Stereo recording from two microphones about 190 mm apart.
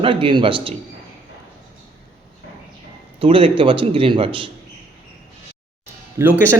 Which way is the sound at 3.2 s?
30° right (ahead or behind).